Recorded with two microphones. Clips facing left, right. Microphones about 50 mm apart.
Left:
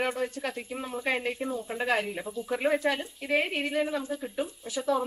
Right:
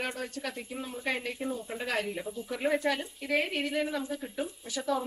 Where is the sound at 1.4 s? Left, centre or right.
Centre.